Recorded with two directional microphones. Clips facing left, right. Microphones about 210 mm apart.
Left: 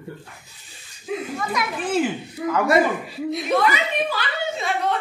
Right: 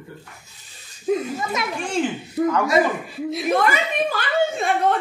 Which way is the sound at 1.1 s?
40° right (ahead or behind).